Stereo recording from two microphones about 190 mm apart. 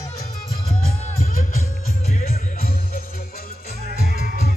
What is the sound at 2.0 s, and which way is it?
Music, 35° left (ahead or behind).